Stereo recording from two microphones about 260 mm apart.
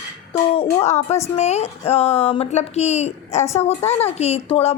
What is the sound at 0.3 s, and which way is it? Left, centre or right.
A woman's voice, left.